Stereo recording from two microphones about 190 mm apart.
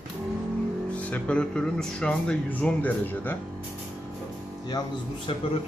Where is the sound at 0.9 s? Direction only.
5° left (ahead or behind).